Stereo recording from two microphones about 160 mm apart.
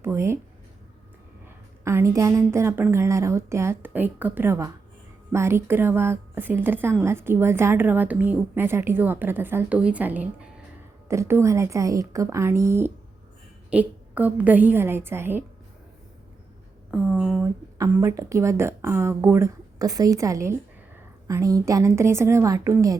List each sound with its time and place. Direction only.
0.0 s a woman's voice: 15° right (ahead or behind)
1.5 s a woman's voice: 15° right (ahead or behind)
16.9 s speech: centre (ahead or behind)
17.4 s a woman's voice: 15° right (ahead or behind)